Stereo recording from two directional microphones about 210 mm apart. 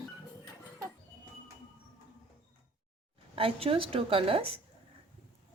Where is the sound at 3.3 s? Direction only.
25° right (ahead or behind).